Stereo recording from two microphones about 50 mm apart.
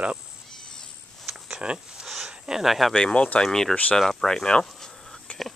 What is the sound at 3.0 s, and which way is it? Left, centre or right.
Speech, centre.